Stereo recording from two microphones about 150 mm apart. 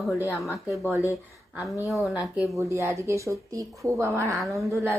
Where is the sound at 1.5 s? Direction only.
5° right (ahead or behind).